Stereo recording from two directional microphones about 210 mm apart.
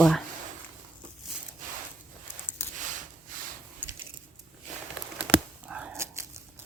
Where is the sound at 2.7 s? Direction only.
35° right (ahead or behind).